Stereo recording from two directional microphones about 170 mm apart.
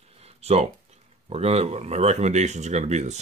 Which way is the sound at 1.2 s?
35° right (ahead or behind).